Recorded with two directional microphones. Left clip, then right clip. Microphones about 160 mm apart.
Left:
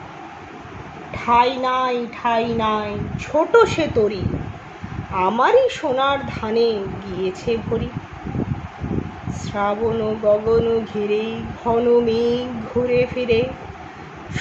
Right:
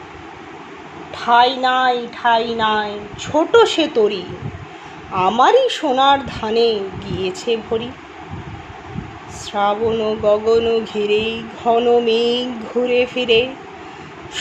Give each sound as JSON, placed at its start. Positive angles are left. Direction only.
{"t": 1.1, "sound": "a woman's voice", "side_deg": -30}
{"t": 9.5, "sound": "speech", "side_deg": -40}